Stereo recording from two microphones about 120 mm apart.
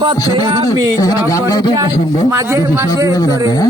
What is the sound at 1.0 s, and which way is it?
Speech, 30° left (ahead or behind).